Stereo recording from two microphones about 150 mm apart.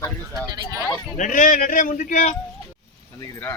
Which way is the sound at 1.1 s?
60° left (ahead or behind).